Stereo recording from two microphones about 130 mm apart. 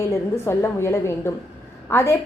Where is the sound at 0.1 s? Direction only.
20° left (ahead or behind).